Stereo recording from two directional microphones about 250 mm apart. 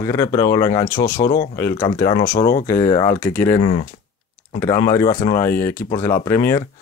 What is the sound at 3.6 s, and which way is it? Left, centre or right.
Speech, left.